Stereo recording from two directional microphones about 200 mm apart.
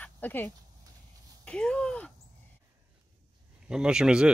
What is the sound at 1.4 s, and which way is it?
Speech, 5° left (ahead or behind).